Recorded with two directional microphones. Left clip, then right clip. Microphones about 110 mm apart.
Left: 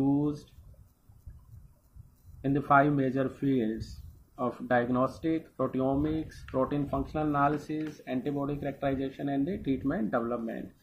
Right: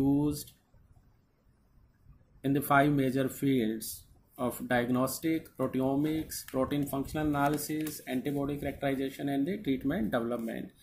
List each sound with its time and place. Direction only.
0.0 s a sound: 10° right (ahead or behind)
2.4 s speech: 5° right (ahead or behind)
4.6 s speech: 5° right (ahead or behind)
10.2 s speech: 20° right (ahead or behind)